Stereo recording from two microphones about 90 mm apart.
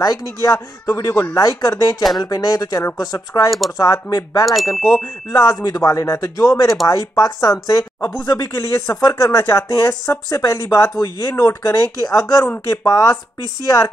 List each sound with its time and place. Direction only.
0.0 s speech: 40° left (ahead or behind)
3.4 s speech: centre (ahead or behind)
3.7 s speech: 40° left (ahead or behind)
4.5 s speech: centre (ahead or behind)
5.3 s speech: 35° left (ahead or behind)
8.3 s speech: 30° left (ahead or behind)